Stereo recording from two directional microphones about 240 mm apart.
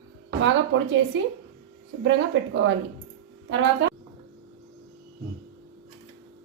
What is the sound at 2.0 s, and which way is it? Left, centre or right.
Speech, right.